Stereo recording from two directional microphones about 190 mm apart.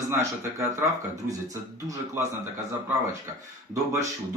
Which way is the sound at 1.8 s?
15° right (ahead or behind).